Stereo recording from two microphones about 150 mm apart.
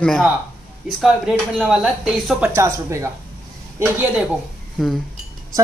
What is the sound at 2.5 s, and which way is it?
Speech, 20° right (ahead or behind).